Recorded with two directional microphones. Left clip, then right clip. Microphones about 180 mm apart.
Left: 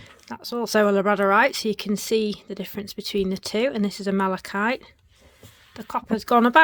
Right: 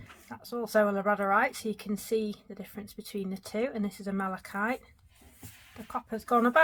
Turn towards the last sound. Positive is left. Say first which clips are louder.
# left 8 dB
turn(degrees=60)  # may be behind; listen again after turning